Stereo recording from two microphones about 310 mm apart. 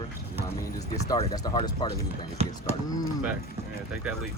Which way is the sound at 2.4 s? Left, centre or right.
Centre.